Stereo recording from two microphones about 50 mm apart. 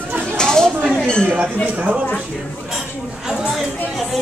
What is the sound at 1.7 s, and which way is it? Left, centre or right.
Speech, right.